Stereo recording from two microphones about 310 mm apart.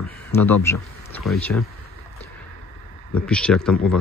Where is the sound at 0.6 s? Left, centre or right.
Centre.